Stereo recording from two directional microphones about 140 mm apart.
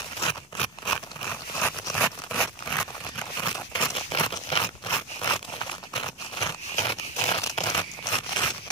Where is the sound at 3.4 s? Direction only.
30° left (ahead or behind).